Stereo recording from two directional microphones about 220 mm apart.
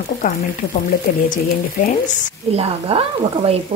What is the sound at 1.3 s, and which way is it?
Speech, 35° left (ahead or behind).